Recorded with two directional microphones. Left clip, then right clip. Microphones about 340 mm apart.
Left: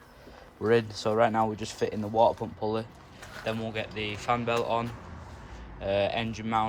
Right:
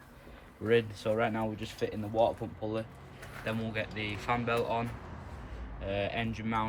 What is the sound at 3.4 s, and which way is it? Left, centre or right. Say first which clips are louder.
Speech: left 3 dB; centre.